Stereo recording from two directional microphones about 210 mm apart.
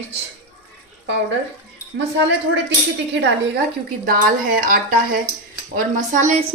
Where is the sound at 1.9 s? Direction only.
55° right (ahead or behind).